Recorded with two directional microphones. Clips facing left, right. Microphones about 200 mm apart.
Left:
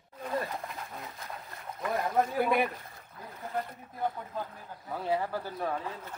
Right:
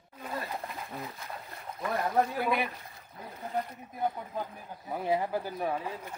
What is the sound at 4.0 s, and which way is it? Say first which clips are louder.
Speech: right 1 dB; 15° right (ahead or behind).